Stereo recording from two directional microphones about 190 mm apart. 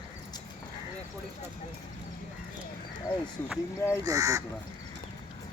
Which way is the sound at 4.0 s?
20° right (ahead or behind).